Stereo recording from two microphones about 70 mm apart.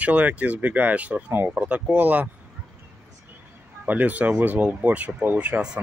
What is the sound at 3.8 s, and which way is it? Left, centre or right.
Speech, right.